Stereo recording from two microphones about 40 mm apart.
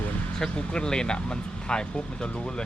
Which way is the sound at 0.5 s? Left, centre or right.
Left.